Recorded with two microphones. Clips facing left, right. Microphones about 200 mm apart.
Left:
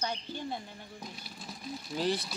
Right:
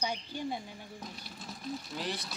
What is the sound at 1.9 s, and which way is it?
Speech, 30° left (ahead or behind).